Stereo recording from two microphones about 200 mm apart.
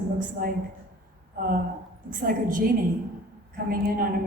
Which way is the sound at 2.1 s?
40° right (ahead or behind).